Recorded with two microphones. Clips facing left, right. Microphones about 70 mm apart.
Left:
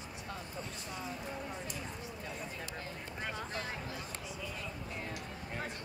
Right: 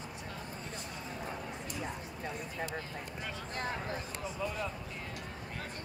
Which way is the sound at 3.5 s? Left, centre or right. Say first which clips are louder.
Right 3 dB; right.